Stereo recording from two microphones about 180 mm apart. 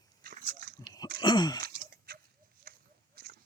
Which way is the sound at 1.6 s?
55° right (ahead or behind).